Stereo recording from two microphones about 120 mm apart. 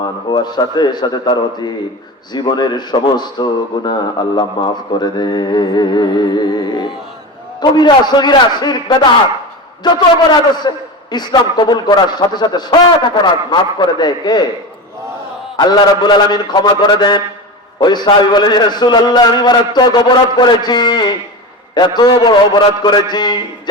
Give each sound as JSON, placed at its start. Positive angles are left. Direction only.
{"t": 0.3, "sound": "a man's voice", "side_deg": 35}
{"t": 7.6, "sound": "a man's voice", "side_deg": 35}
{"t": 15.5, "sound": "a man's voice", "side_deg": 40}